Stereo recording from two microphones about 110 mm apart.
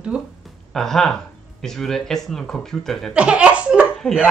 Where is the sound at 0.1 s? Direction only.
10° right (ahead or behind).